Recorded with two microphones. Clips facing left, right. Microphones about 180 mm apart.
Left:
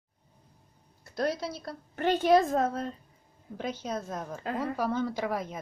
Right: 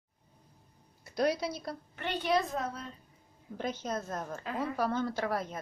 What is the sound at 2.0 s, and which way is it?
Speech, 45° left (ahead or behind).